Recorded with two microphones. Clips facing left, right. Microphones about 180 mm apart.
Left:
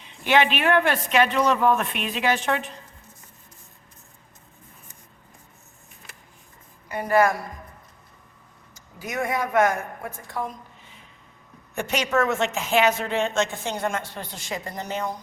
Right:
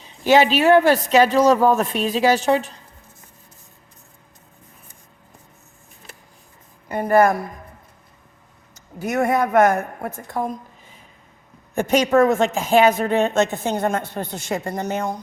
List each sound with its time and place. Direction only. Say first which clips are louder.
0.0 s speech: right 5 dB; 35° right (ahead or behind)
6.8 s a woman's voice: right 4 dB; 50° right (ahead or behind)
9.0 s a woman's voice: right 7 dB; 45° right (ahead or behind)
12.8 s a woman's voice: right 5 dB; 50° right (ahead or behind)